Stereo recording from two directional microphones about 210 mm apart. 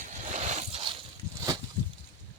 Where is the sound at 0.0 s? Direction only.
35° right (ahead or behind).